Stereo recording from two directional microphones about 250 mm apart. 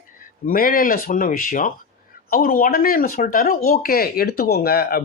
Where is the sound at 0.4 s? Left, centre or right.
Left.